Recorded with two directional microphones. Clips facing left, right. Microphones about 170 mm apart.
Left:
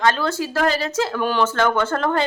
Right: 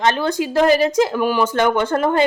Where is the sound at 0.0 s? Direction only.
20° right (ahead or behind).